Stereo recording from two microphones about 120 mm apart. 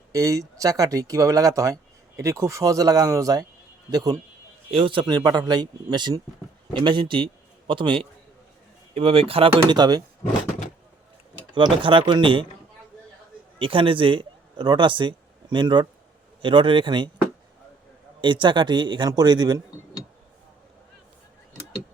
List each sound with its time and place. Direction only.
0.1 s speech: 30° right (ahead or behind)
4.7 s speech: 45° right (ahead or behind)
11.5 s speech: 45° right (ahead or behind)
13.6 s speech: 45° right (ahead or behind)
18.2 s speech: 40° right (ahead or behind)